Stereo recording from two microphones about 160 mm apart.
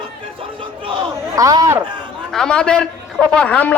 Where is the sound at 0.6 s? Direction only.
30° right (ahead or behind).